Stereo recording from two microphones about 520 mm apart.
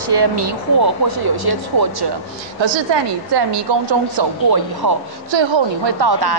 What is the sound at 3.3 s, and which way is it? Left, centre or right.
Speech, right.